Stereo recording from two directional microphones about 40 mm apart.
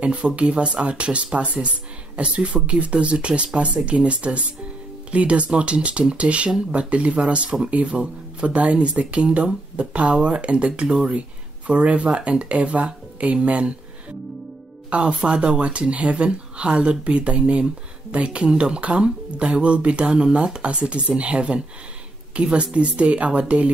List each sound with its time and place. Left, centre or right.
0.0 s speech: right
14.9 s speech: right